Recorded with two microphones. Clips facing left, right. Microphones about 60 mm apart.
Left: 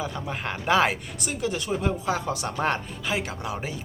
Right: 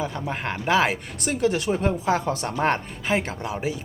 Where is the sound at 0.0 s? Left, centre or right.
Right.